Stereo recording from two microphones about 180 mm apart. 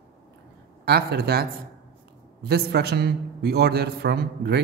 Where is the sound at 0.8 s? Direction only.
60° right (ahead or behind).